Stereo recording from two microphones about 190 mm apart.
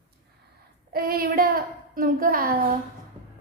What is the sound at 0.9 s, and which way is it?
A child's voice, 50° right (ahead or behind).